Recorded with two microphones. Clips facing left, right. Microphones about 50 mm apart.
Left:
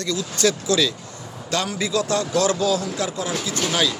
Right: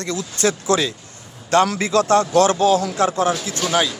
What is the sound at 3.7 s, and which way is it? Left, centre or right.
Speech, right.